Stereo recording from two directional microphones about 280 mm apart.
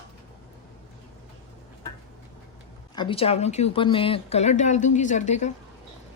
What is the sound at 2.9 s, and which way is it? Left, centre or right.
Speech, centre.